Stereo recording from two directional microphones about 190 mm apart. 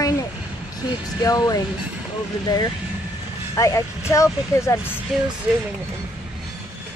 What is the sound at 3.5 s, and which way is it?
Speech, 15° left (ahead or behind).